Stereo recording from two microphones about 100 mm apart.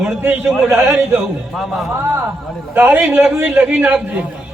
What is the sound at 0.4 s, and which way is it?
Speech, 5° right (ahead or behind).